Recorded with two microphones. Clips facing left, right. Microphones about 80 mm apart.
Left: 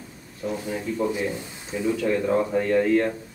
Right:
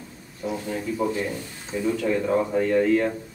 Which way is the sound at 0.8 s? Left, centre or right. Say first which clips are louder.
Even; centre.